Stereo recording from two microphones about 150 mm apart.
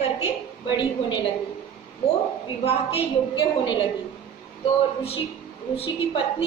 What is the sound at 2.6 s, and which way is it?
A woman's voice, 40° left (ahead or behind).